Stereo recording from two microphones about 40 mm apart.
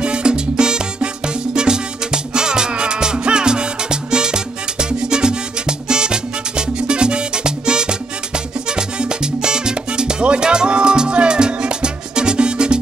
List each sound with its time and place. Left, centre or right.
0.0 s music: right